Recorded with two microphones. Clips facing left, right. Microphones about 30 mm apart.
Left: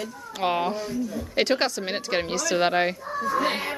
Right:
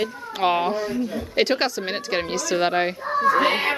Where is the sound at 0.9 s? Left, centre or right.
Right.